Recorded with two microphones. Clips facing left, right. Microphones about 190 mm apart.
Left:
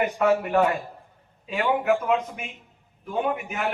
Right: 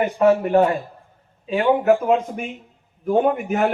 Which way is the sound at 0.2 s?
30° right (ahead or behind).